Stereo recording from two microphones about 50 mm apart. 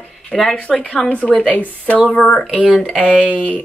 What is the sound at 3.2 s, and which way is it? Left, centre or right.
Speech, left.